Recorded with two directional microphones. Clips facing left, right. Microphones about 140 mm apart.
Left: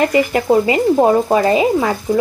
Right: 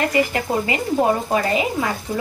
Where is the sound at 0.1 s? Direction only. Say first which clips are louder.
Left 7 dB; 25° left (ahead or behind).